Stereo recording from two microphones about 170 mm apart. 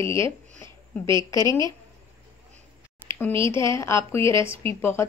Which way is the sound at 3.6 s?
15° left (ahead or behind).